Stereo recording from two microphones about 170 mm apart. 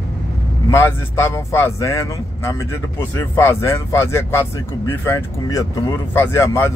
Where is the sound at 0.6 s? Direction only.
15° left (ahead or behind).